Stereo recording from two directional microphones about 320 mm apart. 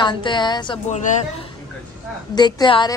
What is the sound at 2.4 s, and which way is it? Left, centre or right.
Speech, centre.